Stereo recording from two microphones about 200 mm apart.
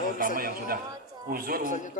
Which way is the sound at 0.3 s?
45° right (ahead or behind).